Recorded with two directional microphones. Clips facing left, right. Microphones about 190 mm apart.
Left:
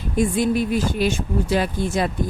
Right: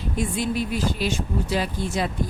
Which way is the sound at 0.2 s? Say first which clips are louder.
Left 6 dB; 50° left (ahead or behind).